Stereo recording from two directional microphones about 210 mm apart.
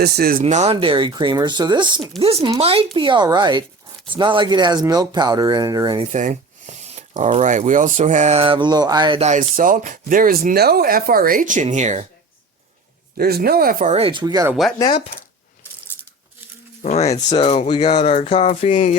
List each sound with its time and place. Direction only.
0.0 s speech: 45° right (ahead or behind)
0.4 s speech: 30° right (ahead or behind)
6.1 s speech: 35° right (ahead or behind)
13.1 s speech: 45° right (ahead or behind); by 14.5 s 15° right (ahead or behind)
14.5 s speech: centre (ahead or behind)
16.8 s speech: 30° left (ahead or behind)
17.1 s speech: 20° left (ahead or behind)